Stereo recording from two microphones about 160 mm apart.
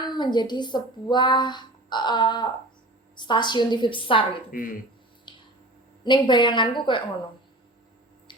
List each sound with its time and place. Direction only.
0.0 s speech: 25° left (ahead or behind)
4.5 s speech: 60° left (ahead or behind)
5.3 s squish: 30° left (ahead or behind)
6.1 s speech: 30° left (ahead or behind)